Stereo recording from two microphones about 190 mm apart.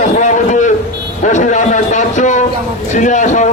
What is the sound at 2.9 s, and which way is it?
Speech, 40° left (ahead or behind).